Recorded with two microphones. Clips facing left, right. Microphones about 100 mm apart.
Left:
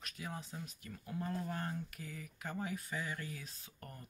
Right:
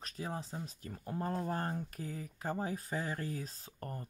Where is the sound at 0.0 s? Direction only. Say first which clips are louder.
Right 5 dB; 35° right (ahead or behind).